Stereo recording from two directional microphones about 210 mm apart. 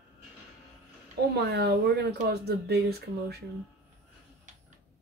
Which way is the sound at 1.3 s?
50° right (ahead or behind).